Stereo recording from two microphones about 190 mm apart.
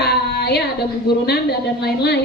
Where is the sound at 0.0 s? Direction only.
55° left (ahead or behind).